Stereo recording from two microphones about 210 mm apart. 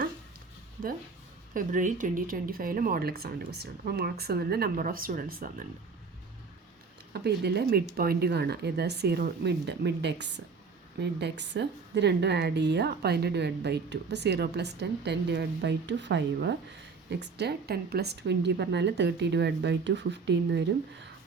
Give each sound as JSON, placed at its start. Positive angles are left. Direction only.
{"t": 1.5, "sound": "a woman's voice", "side_deg": -40}
{"t": 7.1, "sound": "a woman's voice", "side_deg": -50}